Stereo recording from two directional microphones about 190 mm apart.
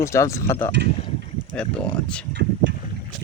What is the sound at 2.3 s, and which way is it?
Boat, 60° right (ahead or behind).